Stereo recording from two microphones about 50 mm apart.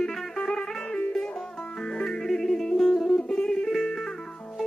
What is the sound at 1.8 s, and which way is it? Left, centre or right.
Music, centre.